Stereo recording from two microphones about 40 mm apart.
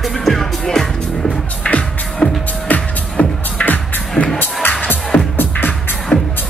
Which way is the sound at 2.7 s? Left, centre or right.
Left.